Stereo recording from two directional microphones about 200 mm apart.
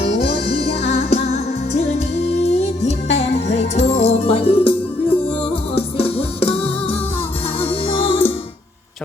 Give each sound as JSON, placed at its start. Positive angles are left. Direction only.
{"t": 0.7, "sound": "music", "side_deg": 35}